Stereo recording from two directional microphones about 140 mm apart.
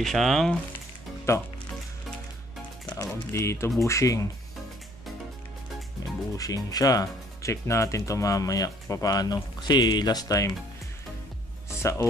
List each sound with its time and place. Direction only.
0.0 s speech: centre (ahead or behind)
1.3 s speech: 20° left (ahead or behind)
2.9 s speech: 20° left (ahead or behind)
6.3 s speech: 25° left (ahead or behind)
11.8 s speech: 20° left (ahead or behind)